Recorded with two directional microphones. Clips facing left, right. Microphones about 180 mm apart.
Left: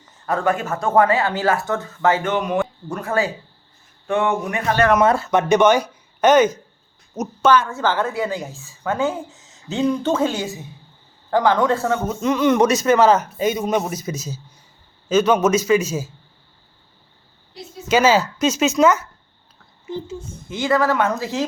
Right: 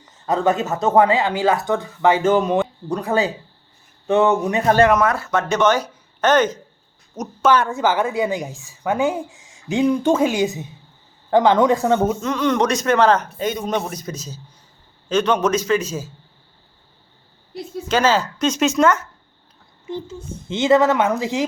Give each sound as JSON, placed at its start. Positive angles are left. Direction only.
{"t": 0.3, "sound": "speech", "side_deg": -20}
{"t": 2.2, "sound": "speech", "side_deg": -25}
{"t": 4.9, "sound": "speech", "side_deg": 25}
{"t": 7.7, "sound": "speech", "side_deg": -15}
{"t": 12.2, "sound": "speech", "side_deg": 10}
{"t": 17.8, "sound": "speech", "side_deg": 10}
{"t": 20.5, "sound": "speech", "side_deg": -25}